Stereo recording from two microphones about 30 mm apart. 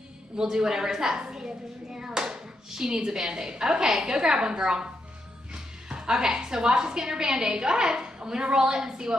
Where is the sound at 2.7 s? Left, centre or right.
Centre.